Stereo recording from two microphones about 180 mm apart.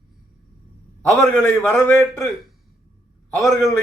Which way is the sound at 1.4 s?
10° left (ahead or behind).